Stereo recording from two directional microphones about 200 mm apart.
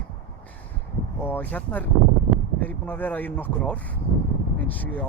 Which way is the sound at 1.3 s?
10° left (ahead or behind).